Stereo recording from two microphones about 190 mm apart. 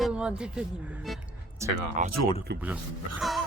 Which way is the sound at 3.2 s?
Centre (ahead or behind).